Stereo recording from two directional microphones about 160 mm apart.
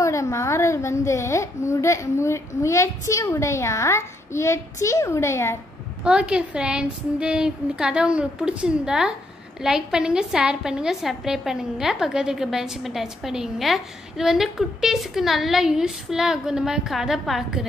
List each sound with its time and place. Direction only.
0.0 s a woman's voice: 20° left (ahead or behind)
6.0 s a woman's voice: 5° right (ahead or behind)